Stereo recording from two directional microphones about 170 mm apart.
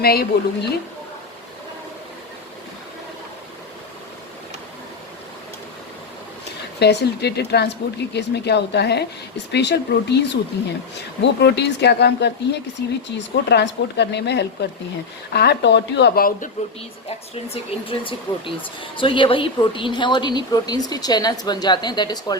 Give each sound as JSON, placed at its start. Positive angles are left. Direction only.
{"t": 0.0, "sound": "speech", "side_deg": 65}
{"t": 6.7, "sound": "speech", "side_deg": 75}
{"t": 13.1, "sound": "speech", "side_deg": 90}
{"t": 17.3, "sound": "a woman's voice", "side_deg": 35}